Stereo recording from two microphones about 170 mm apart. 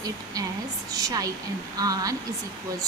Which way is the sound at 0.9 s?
20° right (ahead or behind).